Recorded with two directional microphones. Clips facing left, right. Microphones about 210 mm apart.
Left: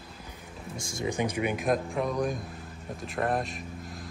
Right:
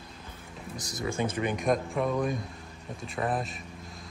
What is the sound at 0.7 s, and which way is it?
Speech, 25° left (ahead or behind).